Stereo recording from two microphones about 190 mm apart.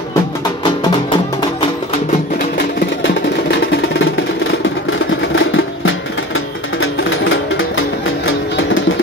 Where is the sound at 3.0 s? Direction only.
70° left (ahead or behind).